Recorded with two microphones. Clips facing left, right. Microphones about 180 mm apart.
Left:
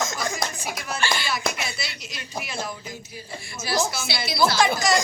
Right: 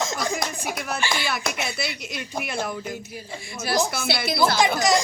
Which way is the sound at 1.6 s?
55° right (ahead or behind).